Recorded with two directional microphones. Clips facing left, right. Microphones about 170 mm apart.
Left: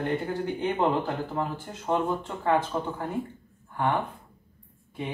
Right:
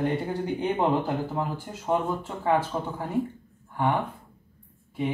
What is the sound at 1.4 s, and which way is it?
Speech, 10° right (ahead or behind).